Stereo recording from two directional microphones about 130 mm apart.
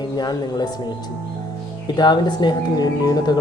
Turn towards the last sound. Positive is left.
turn(degrees=35)  # may be behind; listen again after turning